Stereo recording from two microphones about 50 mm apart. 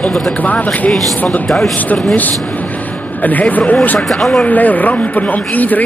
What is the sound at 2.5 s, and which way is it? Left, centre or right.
Vehicle, left.